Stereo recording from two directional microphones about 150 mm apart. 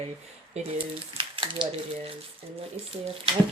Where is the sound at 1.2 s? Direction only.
35° right (ahead or behind).